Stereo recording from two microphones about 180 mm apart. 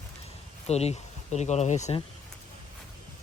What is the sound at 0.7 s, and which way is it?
Speech, 35° left (ahead or behind).